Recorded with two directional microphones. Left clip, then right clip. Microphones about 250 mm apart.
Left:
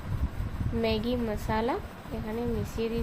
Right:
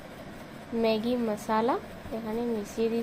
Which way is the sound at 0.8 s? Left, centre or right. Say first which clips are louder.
Right 2 dB; centre.